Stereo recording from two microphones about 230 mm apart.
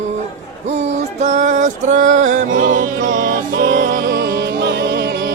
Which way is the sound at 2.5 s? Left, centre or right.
Right.